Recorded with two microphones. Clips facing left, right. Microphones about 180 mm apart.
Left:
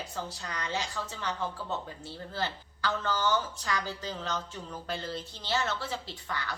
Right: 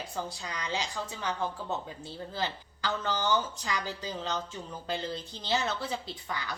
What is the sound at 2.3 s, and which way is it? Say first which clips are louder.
A woman's voice: left 1 dB; 15° right (ahead or behind).